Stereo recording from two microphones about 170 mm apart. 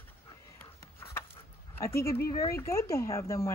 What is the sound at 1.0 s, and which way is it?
Dog, 15° left (ahead or behind).